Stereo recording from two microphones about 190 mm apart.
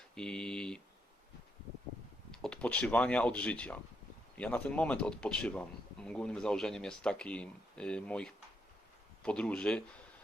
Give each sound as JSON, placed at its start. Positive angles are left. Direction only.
{"t": 0.1, "sound": "speech", "side_deg": 5}
{"t": 2.3, "sound": "speech", "side_deg": 5}